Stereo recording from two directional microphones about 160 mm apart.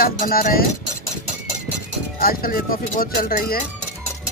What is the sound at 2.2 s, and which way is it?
Speech, 65° left (ahead or behind).